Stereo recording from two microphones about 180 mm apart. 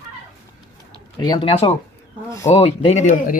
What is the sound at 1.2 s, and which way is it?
Speech, 25° left (ahead or behind).